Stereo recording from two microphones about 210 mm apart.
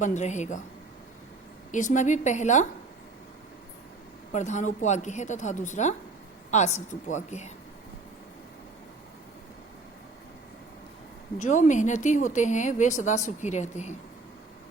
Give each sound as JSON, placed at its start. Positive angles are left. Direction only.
{"t": 0.0, "sound": "a woman's voice", "side_deg": 35}
{"t": 1.7, "sound": "a woman's voice", "side_deg": 35}
{"t": 4.3, "sound": "a woman's voice", "side_deg": 35}
{"t": 11.4, "sound": "a woman's voice", "side_deg": 35}